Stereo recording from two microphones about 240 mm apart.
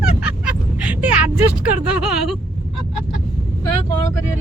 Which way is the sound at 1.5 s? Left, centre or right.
Centre.